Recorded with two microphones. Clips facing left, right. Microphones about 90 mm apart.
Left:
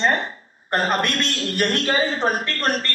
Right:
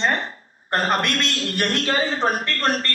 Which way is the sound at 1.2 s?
45° left (ahead or behind).